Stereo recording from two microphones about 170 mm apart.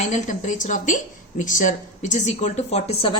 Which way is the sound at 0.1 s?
45° left (ahead or behind).